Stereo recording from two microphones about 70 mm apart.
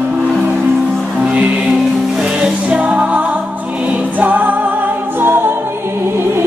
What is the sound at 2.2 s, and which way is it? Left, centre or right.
Music, centre.